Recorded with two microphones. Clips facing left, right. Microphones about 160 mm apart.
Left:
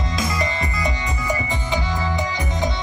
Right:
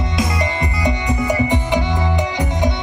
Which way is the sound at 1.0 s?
70° right (ahead or behind).